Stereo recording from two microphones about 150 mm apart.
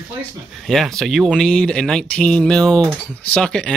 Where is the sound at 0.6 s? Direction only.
Centre (ahead or behind).